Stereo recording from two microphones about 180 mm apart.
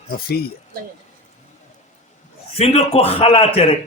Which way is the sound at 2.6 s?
35° left (ahead or behind).